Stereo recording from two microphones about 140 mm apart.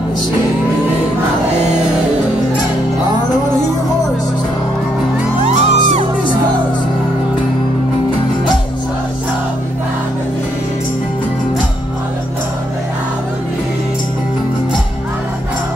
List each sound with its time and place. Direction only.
5.4 s music: 55° right (ahead or behind)